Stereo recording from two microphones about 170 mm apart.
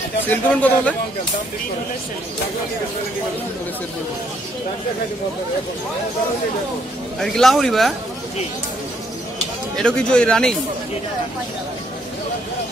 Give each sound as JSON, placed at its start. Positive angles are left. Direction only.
{"t": 0.3, "sound": "speech", "side_deg": 10}
{"t": 7.2, "sound": "speech", "side_deg": 0}
{"t": 9.8, "sound": "speech", "side_deg": 5}